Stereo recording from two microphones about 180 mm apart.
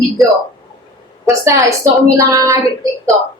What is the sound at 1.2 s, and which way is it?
Speech, 15° right (ahead or behind).